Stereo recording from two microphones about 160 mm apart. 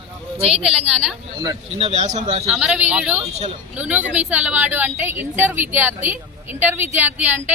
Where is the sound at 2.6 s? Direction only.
10° right (ahead or behind).